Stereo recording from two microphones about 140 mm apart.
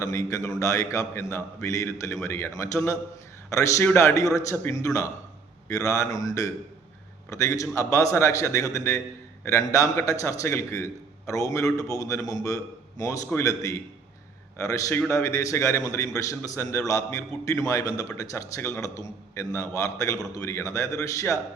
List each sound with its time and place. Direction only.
0.0 s a man's voice: 25° left (ahead or behind)